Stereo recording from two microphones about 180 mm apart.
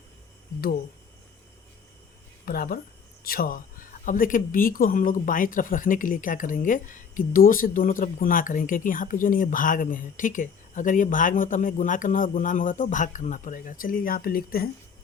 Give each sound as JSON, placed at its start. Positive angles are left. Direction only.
{"t": 2.4, "sound": "speech", "side_deg": 55}